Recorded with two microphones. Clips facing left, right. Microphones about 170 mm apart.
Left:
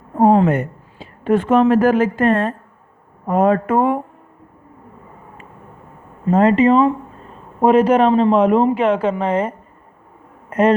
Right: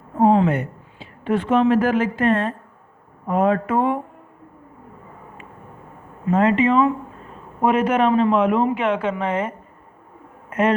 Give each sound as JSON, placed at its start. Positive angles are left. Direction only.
{"t": 0.2, "sound": "a woman's voice", "side_deg": 50}
{"t": 6.2, "sound": "speech", "side_deg": 35}